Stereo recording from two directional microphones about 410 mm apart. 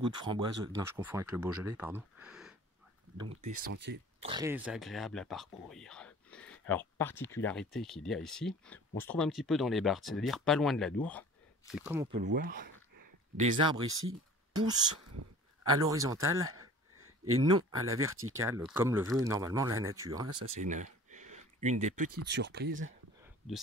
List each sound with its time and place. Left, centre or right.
0.0 s speech: centre
3.2 s speech: centre
4.2 s speech: centre
12.3 s speech: right
13.8 s speech: right
14.5 s speech: centre
20.6 s a sound: centre
22.3 s speech: right